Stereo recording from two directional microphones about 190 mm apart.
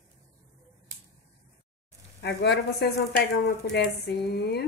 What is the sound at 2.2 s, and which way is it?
Speech, 60° left (ahead or behind).